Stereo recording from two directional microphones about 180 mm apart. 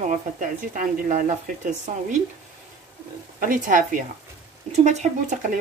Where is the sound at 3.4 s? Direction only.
45° right (ahead or behind).